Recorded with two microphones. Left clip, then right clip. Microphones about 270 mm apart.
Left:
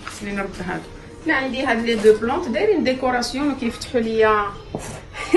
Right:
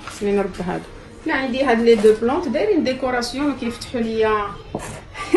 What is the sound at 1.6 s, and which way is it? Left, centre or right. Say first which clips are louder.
Speech: right 6 dB; centre.